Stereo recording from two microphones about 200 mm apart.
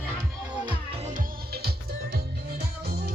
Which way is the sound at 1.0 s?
45° right (ahead or behind).